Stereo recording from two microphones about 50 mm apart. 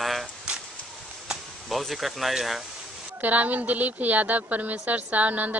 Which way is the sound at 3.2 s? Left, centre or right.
Right.